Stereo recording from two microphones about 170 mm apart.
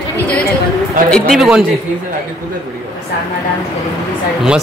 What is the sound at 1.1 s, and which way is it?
Speech, centre (ahead or behind).